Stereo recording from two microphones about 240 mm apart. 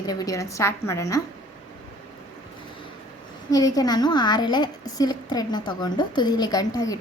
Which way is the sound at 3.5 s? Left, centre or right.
Centre.